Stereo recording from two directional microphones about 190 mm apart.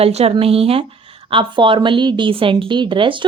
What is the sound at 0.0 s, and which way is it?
Speech, 35° right (ahead or behind).